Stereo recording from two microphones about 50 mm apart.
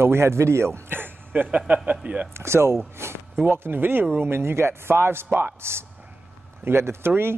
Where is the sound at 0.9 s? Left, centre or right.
Right.